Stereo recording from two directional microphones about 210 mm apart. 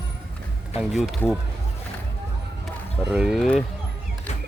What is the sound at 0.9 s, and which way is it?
Speech, centre (ahead or behind).